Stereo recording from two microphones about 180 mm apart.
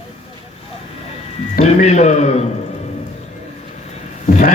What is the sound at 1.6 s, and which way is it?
Speech, 40° left (ahead or behind).